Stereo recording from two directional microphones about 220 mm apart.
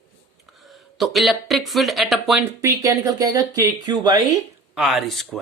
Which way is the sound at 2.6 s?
15° right (ahead or behind).